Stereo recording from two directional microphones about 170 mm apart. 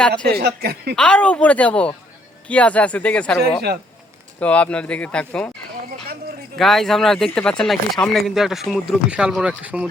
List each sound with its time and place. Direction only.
0.3 s speech: 70° right (ahead or behind)
0.9 s speech: 5° left (ahead or behind)
6.6 s speech: centre (ahead or behind)